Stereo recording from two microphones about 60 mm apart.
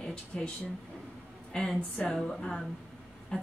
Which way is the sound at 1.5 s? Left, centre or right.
Centre.